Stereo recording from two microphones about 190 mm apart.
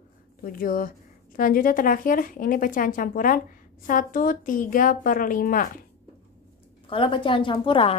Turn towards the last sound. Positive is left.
turn(degrees=25)  # may be behind; listen again after turning